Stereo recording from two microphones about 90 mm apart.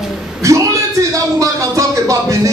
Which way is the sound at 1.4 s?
35° right (ahead or behind).